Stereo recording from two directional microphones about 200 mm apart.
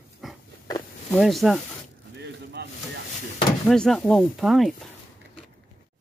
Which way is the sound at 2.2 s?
60° right (ahead or behind).